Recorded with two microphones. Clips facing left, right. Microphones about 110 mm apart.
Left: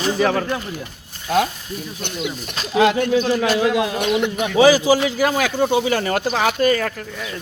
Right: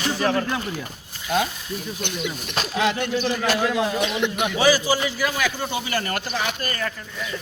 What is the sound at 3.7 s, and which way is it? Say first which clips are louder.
Speech: left 4 dB; 55° left (ahead or behind).